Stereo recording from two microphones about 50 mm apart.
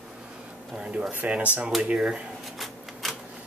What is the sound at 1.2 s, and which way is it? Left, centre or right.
Speech, right.